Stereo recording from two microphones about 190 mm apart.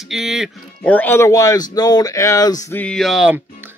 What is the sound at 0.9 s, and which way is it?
Speech, 10° left (ahead or behind).